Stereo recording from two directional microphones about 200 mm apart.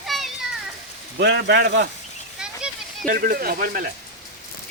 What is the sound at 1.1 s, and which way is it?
Speech, 60° right (ahead or behind).